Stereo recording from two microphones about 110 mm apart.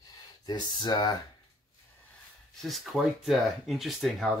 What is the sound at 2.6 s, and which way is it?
Speech, centre (ahead or behind).